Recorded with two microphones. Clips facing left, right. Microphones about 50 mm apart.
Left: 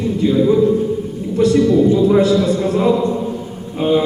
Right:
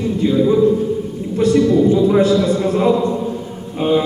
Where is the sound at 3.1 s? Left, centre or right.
Centre.